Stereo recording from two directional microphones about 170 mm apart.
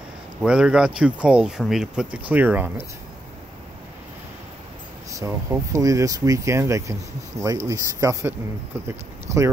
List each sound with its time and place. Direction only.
0.4 s speech: 5° right (ahead or behind)
5.1 s speech: 20° right (ahead or behind)